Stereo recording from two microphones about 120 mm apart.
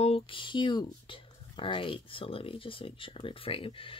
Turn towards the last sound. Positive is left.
turn(degrees=45)  # may be behind; listen again after turning